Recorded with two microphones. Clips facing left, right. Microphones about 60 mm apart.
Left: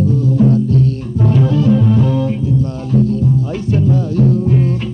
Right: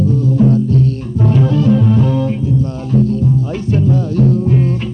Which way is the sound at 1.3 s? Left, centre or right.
Right.